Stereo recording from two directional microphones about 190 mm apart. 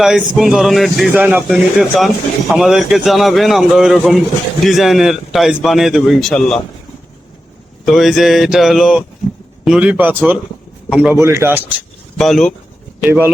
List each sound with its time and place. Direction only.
0.0 s speech: centre (ahead or behind)
7.9 s a man's voice: centre (ahead or behind)
12.1 s speech: centre (ahead or behind)
13.1 s a man's voice: 10° right (ahead or behind)